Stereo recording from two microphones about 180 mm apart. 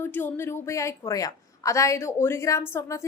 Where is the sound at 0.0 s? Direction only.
10° left (ahead or behind).